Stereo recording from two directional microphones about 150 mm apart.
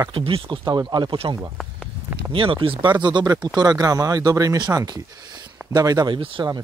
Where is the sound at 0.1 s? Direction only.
35° right (ahead or behind).